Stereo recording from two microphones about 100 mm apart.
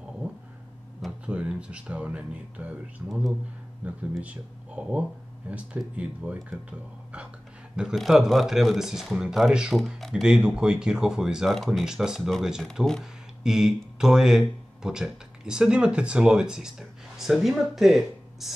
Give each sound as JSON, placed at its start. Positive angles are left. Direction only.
{"t": 1.2, "sound": "speech", "side_deg": -10}
{"t": 3.8, "sound": "speech", "side_deg": -15}
{"t": 7.7, "sound": "speech", "side_deg": -5}
{"t": 13.4, "sound": "speech", "side_deg": -5}